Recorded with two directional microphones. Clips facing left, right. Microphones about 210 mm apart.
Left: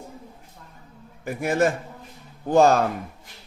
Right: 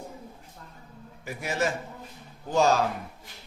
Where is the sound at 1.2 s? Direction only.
55° left (ahead or behind).